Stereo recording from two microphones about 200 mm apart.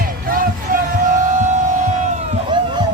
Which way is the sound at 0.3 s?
45° right (ahead or behind).